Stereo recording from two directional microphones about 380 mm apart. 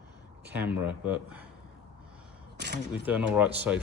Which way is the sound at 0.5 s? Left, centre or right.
Centre.